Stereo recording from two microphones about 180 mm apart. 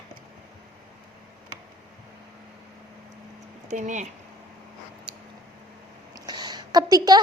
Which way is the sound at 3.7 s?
40° right (ahead or behind).